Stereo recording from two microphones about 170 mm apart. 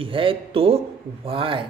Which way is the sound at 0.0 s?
30° right (ahead or behind).